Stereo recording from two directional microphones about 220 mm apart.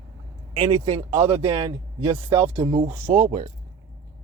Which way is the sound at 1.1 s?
30° right (ahead or behind).